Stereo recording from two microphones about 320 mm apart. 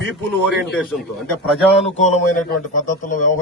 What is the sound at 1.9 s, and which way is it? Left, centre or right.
A man's voice, left.